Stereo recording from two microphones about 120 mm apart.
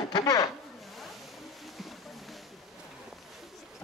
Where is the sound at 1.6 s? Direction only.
Centre (ahead or behind).